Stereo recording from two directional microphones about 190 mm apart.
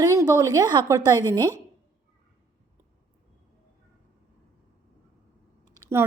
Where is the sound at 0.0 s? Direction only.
15° right (ahead or behind).